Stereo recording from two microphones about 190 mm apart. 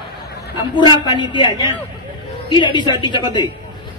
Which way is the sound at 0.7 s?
25° left (ahead or behind).